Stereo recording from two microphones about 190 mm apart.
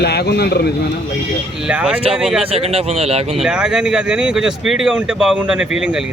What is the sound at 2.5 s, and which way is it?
Speech, 30° right (ahead or behind).